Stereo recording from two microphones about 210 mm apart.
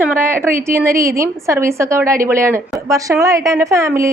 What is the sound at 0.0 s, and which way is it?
Speech, 10° right (ahead or behind).